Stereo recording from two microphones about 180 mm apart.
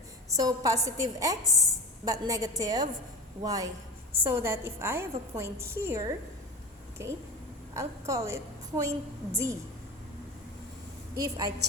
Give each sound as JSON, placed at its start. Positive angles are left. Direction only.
{"t": 0.3, "sound": "a woman's voice", "side_deg": -20}
{"t": 11.2, "sound": "a woman's voice", "side_deg": -20}